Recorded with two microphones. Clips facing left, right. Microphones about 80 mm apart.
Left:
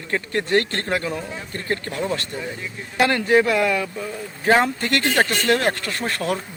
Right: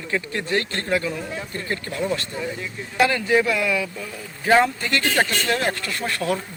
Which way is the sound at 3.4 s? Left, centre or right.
Left.